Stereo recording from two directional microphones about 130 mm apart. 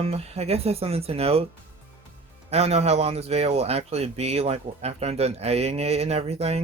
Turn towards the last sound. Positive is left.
turn(degrees=-50)  # may be behind; listen again after turning